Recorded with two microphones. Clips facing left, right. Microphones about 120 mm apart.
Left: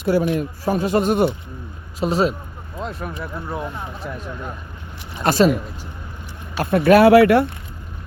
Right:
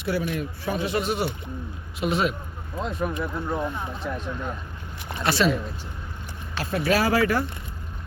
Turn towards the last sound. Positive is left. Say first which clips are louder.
# left 11 dB
turn(degrees=65)  # may be behind; listen again after turning